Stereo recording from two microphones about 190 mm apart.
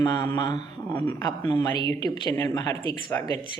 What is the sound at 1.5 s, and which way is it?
Speech, 20° left (ahead or behind).